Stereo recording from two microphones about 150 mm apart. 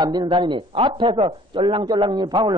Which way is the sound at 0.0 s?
30° right (ahead or behind).